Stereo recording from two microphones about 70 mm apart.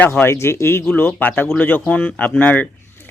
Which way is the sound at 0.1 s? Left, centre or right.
Left.